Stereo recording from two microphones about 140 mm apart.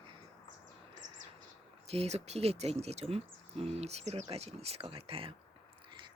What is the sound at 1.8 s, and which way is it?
Speech, 45° right (ahead or behind).